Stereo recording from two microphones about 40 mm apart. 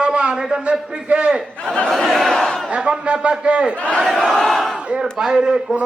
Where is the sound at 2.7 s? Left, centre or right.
Right.